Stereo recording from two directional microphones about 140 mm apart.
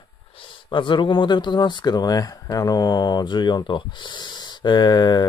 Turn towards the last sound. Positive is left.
turn(degrees=30)  # may be behind; listen again after turning